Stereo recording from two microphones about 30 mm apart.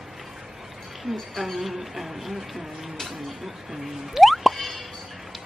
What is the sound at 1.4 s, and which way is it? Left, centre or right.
Speech, centre.